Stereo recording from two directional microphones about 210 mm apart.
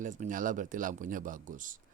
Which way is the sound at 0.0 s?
40° right (ahead or behind).